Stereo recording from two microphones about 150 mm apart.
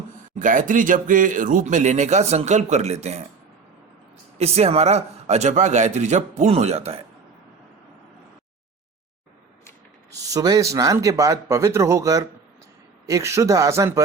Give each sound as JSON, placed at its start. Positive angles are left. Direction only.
{"t": 0.3, "sound": "speech", "side_deg": -60}
{"t": 4.4, "sound": "speech", "side_deg": -45}
{"t": 10.1, "sound": "a man's voice", "side_deg": -25}